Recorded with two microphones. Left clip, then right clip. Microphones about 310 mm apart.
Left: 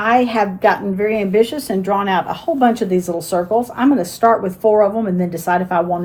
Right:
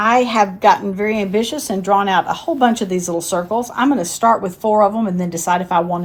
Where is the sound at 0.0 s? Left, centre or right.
Right.